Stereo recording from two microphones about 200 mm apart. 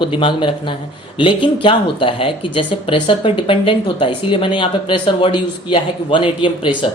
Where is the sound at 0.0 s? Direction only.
25° left (ahead or behind).